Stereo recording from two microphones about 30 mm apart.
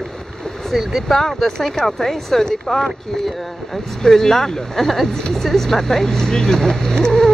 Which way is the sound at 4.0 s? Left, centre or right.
Centre.